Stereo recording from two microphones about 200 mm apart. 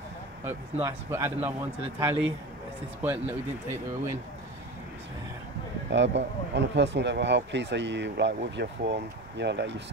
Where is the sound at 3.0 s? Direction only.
10° right (ahead or behind).